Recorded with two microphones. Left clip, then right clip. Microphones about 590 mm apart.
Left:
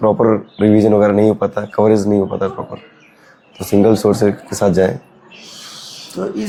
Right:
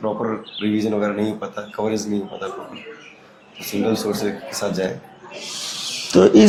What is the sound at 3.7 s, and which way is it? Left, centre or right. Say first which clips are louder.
Speech: left 10 dB; left.